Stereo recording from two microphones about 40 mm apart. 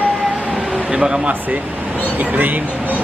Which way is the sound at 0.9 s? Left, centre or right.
Right.